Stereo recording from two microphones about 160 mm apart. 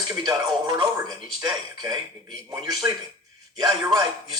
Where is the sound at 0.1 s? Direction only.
25° right (ahead or behind).